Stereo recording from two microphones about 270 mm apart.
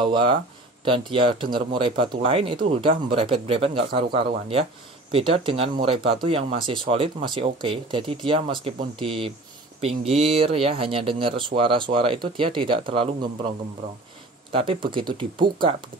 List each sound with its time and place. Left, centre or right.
0.0 s speech: centre
14.5 s speech: centre